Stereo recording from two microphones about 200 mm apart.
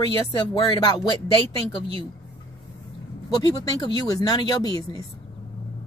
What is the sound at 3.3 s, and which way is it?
Speech, 20° left (ahead or behind).